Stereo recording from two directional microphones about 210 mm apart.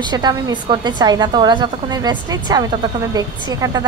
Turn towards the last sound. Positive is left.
turn(degrees=-20)  # may be behind; listen again after turning